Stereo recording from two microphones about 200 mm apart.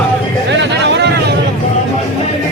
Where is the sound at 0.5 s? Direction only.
60° right (ahead or behind).